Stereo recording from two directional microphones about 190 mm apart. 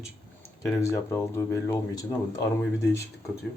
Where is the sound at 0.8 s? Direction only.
15° left (ahead or behind).